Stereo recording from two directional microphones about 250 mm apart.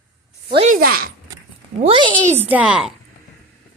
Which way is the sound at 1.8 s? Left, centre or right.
Centre.